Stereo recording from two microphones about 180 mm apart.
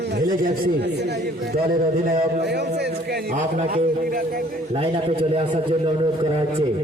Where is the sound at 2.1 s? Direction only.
65° right (ahead or behind).